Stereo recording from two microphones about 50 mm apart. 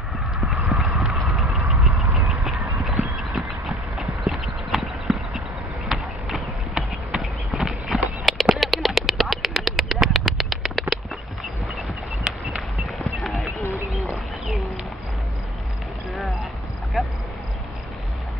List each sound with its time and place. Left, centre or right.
0.7 s clip-clop: centre
1.1 s vehicle: centre
1.5 s vehicle: right
2.2 s a sound: centre
3.3 s clip-clop: centre
5.9 s a sound: centre
7.2 s horse: centre
8.5 s duck: centre
13.0 s clip-clop: centre
13.9 s bird: centre
17.0 s a sound: centre